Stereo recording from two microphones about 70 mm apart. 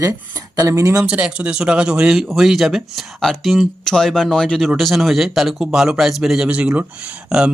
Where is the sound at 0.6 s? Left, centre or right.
Right.